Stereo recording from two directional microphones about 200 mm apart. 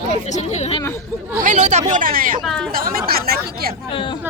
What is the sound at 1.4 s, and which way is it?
Speech, 40° right (ahead or behind).